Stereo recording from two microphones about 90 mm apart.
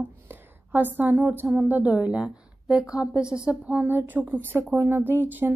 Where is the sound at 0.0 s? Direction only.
20° right (ahead or behind).